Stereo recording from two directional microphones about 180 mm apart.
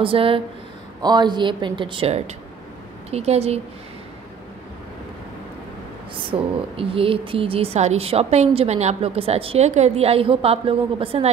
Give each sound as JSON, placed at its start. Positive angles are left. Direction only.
{"t": 0.0, "sound": "a woman's voice", "side_deg": -30}
{"t": 6.1, "sound": "a woman's voice", "side_deg": -30}